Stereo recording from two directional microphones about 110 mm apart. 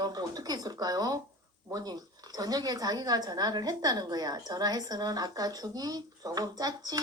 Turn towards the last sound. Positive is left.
turn(degrees=-35)  # may be behind; listen again after turning